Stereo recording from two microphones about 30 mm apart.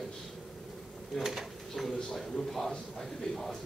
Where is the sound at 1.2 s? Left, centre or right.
Centre.